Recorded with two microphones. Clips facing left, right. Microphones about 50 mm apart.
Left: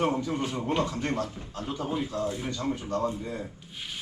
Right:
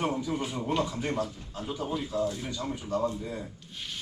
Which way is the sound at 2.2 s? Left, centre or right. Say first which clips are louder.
Even; centre.